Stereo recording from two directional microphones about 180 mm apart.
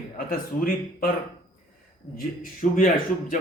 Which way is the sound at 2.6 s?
45° left (ahead or behind).